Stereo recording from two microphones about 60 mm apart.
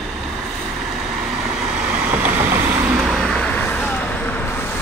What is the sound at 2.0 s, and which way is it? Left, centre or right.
Vehicle, right.